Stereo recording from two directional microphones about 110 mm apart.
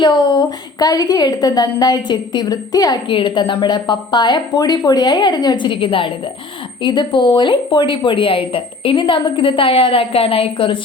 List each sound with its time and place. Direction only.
0.0 s a woman's voice: 45° left (ahead or behind)